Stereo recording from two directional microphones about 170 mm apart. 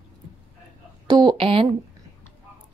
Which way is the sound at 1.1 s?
25° right (ahead or behind).